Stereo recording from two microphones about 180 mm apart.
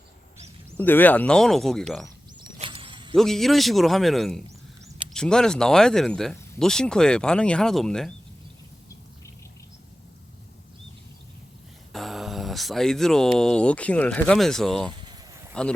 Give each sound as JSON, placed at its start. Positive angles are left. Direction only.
{"t": 0.8, "sound": "speech", "side_deg": 10}
{"t": 2.6, "sound": "a sound", "side_deg": -30}
{"t": 3.2, "sound": "speech", "side_deg": 0}
{"t": 11.9, "sound": "speech", "side_deg": 0}